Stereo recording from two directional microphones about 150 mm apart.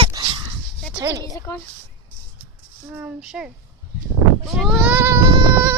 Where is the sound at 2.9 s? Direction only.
5° right (ahead or behind).